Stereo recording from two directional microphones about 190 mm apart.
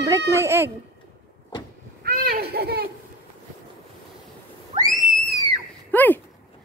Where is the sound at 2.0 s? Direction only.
50° right (ahead or behind).